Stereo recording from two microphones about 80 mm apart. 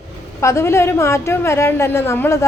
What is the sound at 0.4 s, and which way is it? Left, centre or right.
A woman's voice, left.